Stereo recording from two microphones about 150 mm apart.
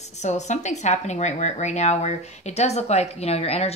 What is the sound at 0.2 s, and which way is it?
Speech, 50° left (ahead or behind).